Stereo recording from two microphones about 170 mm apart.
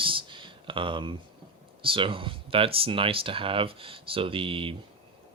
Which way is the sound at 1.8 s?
30° right (ahead or behind).